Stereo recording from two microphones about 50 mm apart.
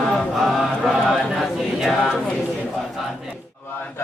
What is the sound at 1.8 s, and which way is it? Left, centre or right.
Mantra, centre.